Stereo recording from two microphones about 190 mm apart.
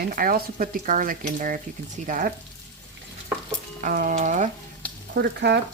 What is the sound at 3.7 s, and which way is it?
Speech, 45° right (ahead or behind).